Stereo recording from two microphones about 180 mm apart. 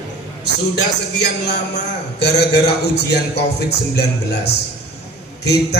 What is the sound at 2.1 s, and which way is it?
A man's voice, 65° left (ahead or behind).